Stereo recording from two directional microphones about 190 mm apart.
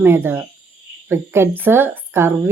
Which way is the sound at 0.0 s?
10° right (ahead or behind).